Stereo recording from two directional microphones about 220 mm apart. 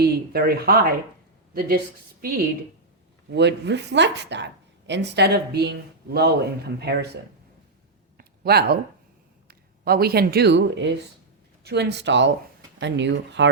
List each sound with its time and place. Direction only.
0.0 s a woman's voice: 45° right (ahead or behind)
8.2 s a sound: 45° right (ahead or behind)
9.5 s speech: 45° right (ahead or behind)